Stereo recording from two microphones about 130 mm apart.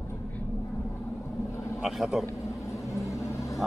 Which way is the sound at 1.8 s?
Centre (ahead or behind).